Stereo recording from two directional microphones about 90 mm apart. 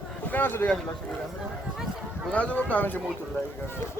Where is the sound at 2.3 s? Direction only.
15° left (ahead or behind).